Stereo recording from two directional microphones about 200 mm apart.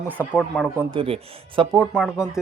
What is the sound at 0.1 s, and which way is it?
Speech, 10° right (ahead or behind).